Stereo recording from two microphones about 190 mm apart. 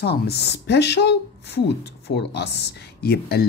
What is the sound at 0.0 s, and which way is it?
Speech, 55° left (ahead or behind).